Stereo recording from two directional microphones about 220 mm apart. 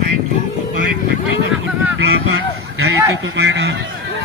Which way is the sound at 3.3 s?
50° right (ahead or behind).